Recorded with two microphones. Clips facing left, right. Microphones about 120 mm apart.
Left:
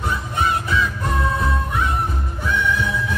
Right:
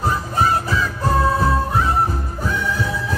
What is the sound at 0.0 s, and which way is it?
Music, 35° right (ahead or behind).